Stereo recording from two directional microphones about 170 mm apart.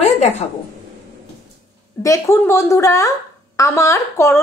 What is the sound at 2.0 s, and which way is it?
A woman's voice, 20° left (ahead or behind).